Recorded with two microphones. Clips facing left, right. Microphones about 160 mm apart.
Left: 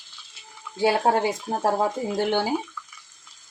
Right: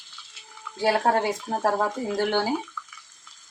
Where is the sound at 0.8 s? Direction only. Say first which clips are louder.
Left 1 dB; 20° left (ahead or behind).